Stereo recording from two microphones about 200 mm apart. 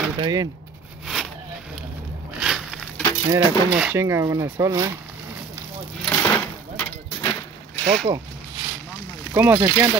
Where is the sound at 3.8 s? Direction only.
10° right (ahead or behind).